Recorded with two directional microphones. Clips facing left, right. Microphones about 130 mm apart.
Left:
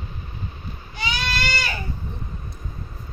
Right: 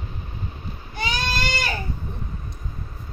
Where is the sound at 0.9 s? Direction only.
45° right (ahead or behind).